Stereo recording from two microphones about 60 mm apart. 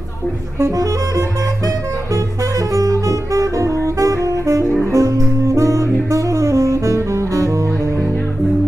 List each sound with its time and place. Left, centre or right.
2.7 s saxophone: right
4.9 s music: right